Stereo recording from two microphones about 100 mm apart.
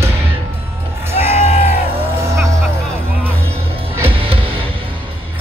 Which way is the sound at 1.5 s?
90° left.